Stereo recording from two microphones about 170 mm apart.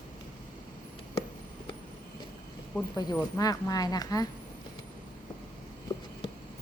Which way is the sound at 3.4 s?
20° left (ahead or behind).